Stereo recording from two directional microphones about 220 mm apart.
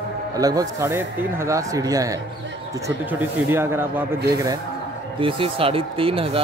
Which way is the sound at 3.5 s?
10° right (ahead or behind).